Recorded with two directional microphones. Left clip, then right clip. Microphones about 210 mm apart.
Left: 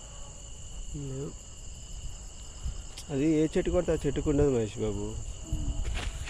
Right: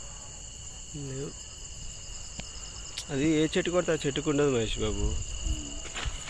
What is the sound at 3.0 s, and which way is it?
Speech, 15° left (ahead or behind).